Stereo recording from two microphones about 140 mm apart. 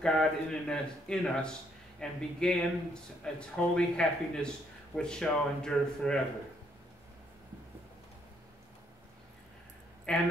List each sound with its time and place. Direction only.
0.0 s speech: 5° left (ahead or behind)
10.1 s speech: 5° left (ahead or behind)